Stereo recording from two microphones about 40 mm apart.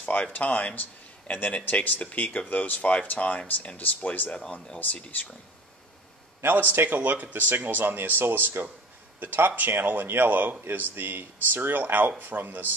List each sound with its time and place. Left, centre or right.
0.0 s a man's voice: left
6.4 s a man's voice: right
7.3 s speech: right